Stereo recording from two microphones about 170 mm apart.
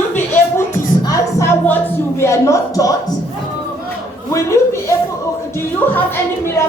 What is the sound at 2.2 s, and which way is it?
Speech, 15° left (ahead or behind).